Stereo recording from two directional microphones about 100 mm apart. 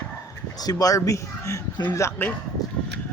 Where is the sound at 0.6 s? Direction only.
35° left (ahead or behind).